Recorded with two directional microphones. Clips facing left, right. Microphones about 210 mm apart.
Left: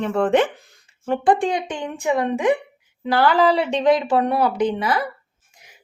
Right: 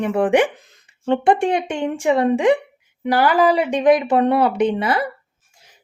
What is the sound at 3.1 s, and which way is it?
A woman's voice, 10° right (ahead or behind).